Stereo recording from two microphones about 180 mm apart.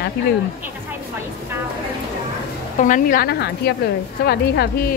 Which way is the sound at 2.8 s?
45° left (ahead or behind).